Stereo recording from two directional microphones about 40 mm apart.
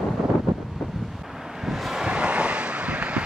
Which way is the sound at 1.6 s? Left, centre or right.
Centre.